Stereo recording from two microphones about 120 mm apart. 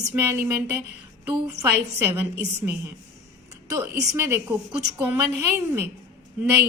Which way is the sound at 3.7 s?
25° right (ahead or behind).